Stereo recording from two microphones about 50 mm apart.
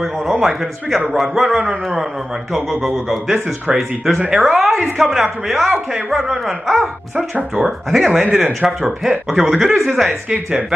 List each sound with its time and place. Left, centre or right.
0.0 s a man's voice: centre
1.6 s speech: right
2.5 s a man's voice: centre
7.2 s speech: right
7.6 s a man's voice: centre